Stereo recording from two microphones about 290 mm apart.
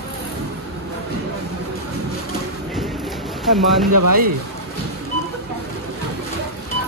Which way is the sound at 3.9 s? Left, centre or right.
Right.